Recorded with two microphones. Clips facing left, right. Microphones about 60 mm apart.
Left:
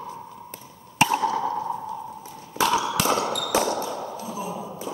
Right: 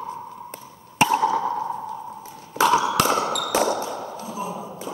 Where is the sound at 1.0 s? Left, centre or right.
Centre.